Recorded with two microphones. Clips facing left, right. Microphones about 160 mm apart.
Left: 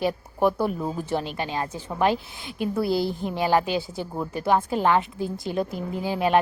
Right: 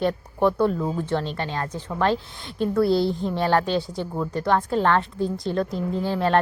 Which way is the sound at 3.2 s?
10° left (ahead or behind).